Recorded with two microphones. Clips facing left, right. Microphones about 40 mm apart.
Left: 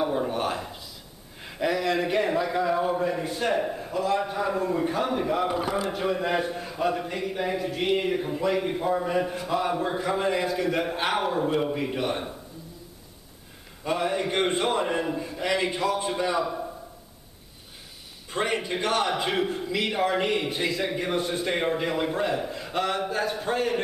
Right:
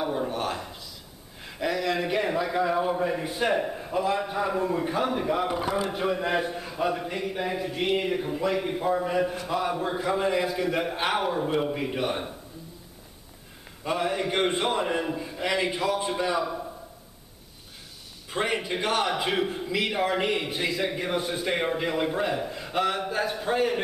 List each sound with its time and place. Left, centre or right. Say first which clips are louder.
0.0 s a sound: left 2 dB; centre
1.4 s a man's voice: left 2 dB; centre
3.9 s a man's voice: even; centre
4.2 s a man's voice: even; centre
13.8 s a man's voice: left 1 dB; centre
18.3 s a man's voice: even; centre